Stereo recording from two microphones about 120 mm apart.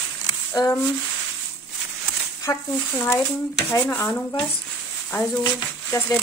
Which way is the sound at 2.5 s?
25° left (ahead or behind).